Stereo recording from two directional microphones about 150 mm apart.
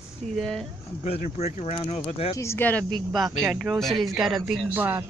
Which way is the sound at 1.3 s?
45° left (ahead or behind).